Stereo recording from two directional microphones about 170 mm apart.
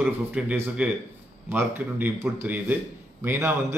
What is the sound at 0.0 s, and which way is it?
A man's voice, 10° right (ahead or behind).